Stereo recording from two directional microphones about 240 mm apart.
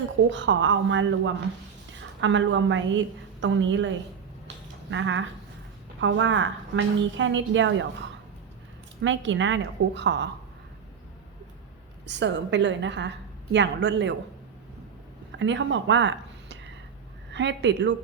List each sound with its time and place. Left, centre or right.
0.3 s a woman's voice: right
9.0 s a woman's voice: right
12.0 s a woman's voice: right
15.4 s a woman's voice: right